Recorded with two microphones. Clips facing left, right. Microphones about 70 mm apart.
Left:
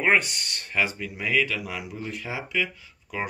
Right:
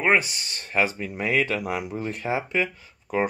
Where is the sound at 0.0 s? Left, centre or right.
Centre.